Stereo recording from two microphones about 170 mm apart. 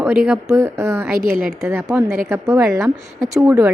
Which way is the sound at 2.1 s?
15° right (ahead or behind).